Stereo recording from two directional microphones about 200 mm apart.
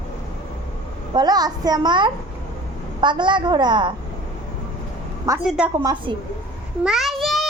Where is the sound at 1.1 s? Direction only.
20° right (ahead or behind).